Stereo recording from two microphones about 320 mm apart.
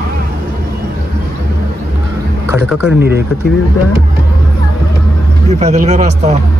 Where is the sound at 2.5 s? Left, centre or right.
Centre.